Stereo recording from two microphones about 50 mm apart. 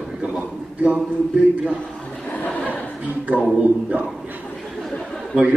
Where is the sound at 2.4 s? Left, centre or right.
Left.